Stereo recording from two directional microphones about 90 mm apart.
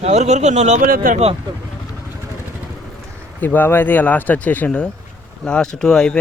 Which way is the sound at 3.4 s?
20° left (ahead or behind).